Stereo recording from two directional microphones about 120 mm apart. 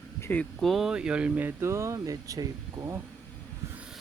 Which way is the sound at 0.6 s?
Centre (ahead or behind).